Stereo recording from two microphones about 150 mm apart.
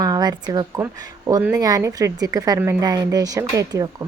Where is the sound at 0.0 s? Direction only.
25° right (ahead or behind).